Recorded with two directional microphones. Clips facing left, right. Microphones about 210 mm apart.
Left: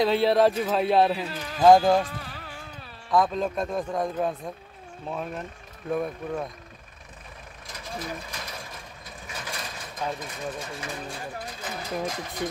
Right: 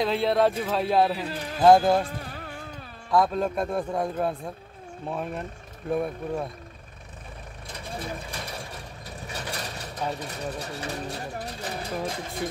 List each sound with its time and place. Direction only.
0.0 s speech: centre (ahead or behind)
2.1 s music: 50° right (ahead or behind)
3.1 s a man's voice: 10° right (ahead or behind)
7.6 s vehicle: 30° right (ahead or behind)
10.1 s speech: 35° right (ahead or behind)